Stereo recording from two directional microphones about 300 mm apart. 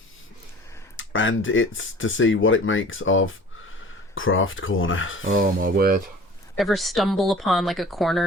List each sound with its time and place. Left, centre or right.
0.9 s speech: left
5.2 s a sound: right
6.6 s speech: centre